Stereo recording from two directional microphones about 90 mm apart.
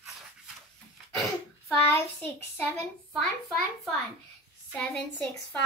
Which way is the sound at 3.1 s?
Centre (ahead or behind).